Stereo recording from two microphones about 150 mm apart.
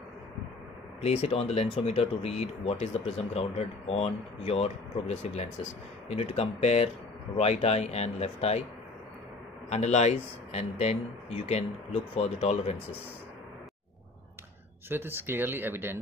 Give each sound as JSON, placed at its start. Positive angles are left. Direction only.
{"t": 1.0, "sound": "speech", "side_deg": 45}
{"t": 9.7, "sound": "speech", "side_deg": 45}
{"t": 14.9, "sound": "speech", "side_deg": -15}